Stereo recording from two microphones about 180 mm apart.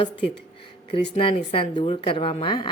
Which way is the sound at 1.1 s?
30° left (ahead or behind).